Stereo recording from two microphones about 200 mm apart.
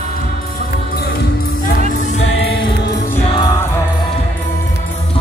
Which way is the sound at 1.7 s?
45° left (ahead or behind).